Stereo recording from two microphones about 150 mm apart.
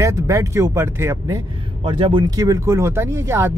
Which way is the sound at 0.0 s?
20° right (ahead or behind).